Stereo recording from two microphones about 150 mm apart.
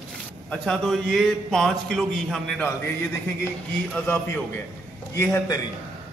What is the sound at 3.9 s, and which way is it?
A man's voice, 15° left (ahead or behind).